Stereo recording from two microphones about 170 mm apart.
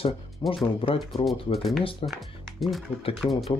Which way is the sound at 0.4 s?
30° left (ahead or behind).